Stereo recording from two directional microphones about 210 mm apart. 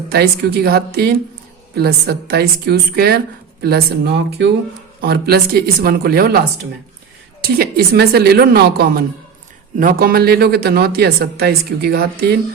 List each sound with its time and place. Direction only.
0.1 s speech: 50° right (ahead or behind)
7.4 s speech: 45° right (ahead or behind)